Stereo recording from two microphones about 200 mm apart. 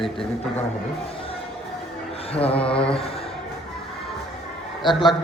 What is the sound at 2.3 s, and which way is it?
Speech, 30° left (ahead or behind).